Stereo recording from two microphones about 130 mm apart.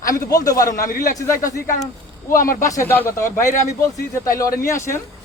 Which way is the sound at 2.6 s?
25° left (ahead or behind).